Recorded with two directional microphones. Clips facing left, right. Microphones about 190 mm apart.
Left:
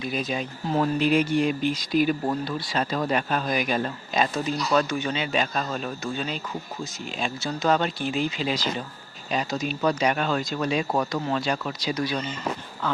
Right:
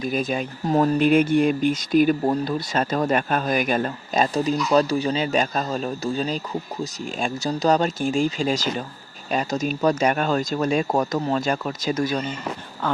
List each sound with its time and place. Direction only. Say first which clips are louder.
0.0 s speech: right 4 dB; 50° right (ahead or behind)